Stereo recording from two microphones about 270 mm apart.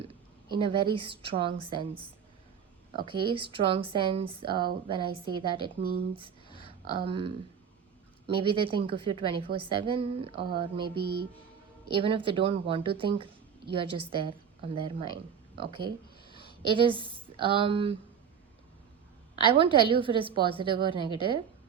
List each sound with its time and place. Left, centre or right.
0.5 s speech: centre
11.9 s speech: centre
16.3 s a sound: centre
16.6 s speech: centre
19.5 s a woman's voice: centre